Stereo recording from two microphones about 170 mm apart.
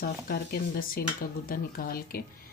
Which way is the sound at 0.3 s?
60° left (ahead or behind).